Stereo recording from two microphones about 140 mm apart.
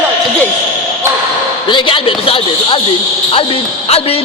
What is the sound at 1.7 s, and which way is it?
A woman's voice, 40° left (ahead or behind).